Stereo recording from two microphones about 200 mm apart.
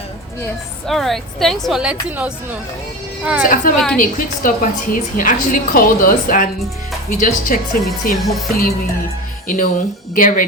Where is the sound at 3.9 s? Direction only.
40° left (ahead or behind).